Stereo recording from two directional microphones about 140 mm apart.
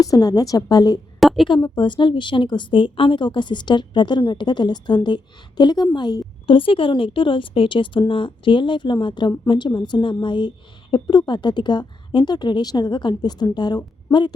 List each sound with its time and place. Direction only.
0.0 s a woman's voice: 25° left (ahead or behind)
1.2 s a sound: centre (ahead or behind)
1.5 s a woman's voice: 35° left (ahead or behind)